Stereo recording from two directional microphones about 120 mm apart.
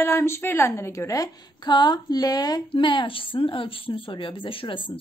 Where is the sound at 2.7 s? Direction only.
40° left (ahead or behind).